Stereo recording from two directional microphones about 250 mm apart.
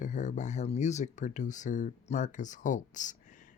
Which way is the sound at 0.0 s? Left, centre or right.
Left.